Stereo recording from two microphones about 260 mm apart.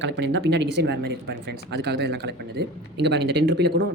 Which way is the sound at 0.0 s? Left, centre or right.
Right.